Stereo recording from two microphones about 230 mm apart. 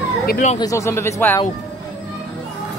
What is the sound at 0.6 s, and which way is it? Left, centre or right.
Speech, centre.